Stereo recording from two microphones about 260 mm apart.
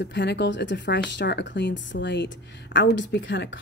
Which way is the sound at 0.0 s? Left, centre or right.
Left.